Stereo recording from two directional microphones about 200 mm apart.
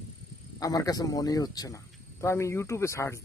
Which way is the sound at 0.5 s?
15° left (ahead or behind).